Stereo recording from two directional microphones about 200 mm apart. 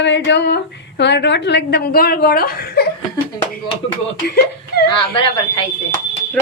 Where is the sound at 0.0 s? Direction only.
60° left (ahead or behind).